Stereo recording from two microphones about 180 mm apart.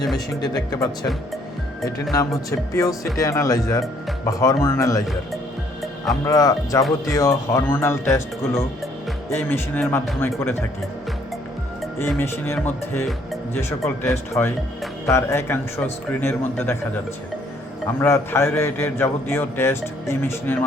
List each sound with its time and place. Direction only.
0.4 s speech: 20° left (ahead or behind)
2.1 s a man's voice: 20° left (ahead or behind)
6.2 s a man's voice: 20° left (ahead or behind)
11.9 s a man's voice: 15° left (ahead or behind)
18.0 s a man's voice: 15° left (ahead or behind)